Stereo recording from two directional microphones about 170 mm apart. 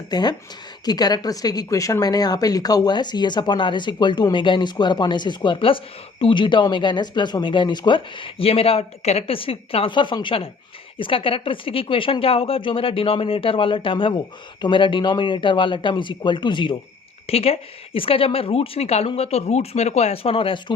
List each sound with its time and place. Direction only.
0.1 s a woman's voice: 25° left (ahead or behind)